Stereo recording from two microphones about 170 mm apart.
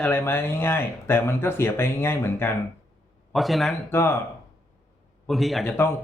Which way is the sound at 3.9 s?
15° left (ahead or behind).